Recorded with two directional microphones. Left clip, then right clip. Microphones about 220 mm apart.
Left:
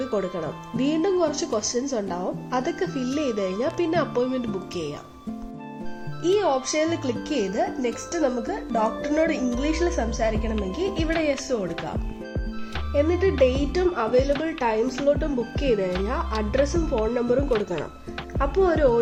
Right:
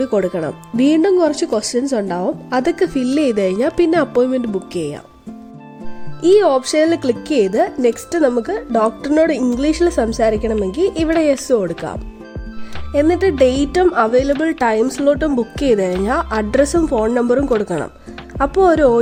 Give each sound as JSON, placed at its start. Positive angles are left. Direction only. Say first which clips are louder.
{"t": 0.1, "sound": "speech", "louder": "right 9 dB", "side_deg": -50}
{"t": 6.2, "sound": "speech", "louder": "right 10 dB", "side_deg": -50}
{"t": 12.9, "sound": "speech", "louder": "right 8 dB", "side_deg": -55}